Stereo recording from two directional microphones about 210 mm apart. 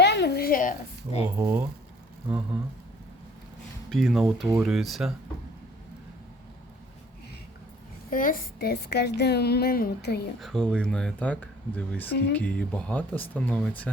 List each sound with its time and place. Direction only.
0.0 s a sound: 55° left (ahead or behind); by 1.2 s 40° left (ahead or behind)
1.4 s speech: 10° right (ahead or behind)
3.8 s speech: centre (ahead or behind)
4.4 s speech: 10° right (ahead or behind)
4.7 s speech: centre (ahead or behind)
8.1 s a child's voice: 40° left (ahead or behind)
10.4 s speech: 5° left (ahead or behind)